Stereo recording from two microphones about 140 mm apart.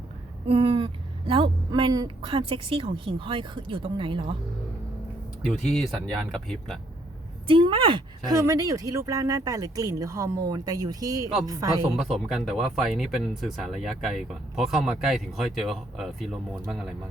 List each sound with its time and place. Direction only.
0.4 s a sound: 40° right (ahead or behind)
1.3 s speech: 35° right (ahead or behind)
6.3 s speech: 5° left (ahead or behind)
7.4 s speech: 40° right (ahead or behind)
11.9 s speech: centre (ahead or behind)